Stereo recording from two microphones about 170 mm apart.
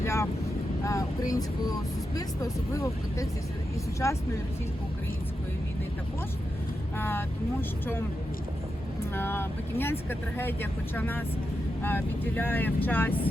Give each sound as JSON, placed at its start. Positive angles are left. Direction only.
{"t": 0.0, "sound": "speech", "side_deg": 15}
{"t": 6.9, "sound": "speech", "side_deg": 10}
{"t": 9.1, "sound": "speech", "side_deg": 15}